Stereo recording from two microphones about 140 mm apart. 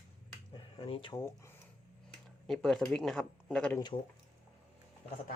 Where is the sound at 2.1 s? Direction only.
Centre (ahead or behind).